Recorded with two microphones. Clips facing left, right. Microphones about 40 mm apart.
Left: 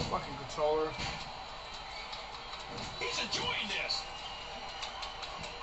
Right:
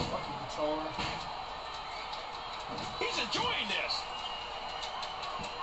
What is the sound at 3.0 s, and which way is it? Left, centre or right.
Speech, right.